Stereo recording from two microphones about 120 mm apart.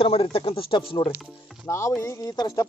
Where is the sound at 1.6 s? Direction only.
25° left (ahead or behind).